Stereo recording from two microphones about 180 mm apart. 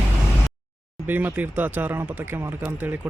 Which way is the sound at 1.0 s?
10° right (ahead or behind).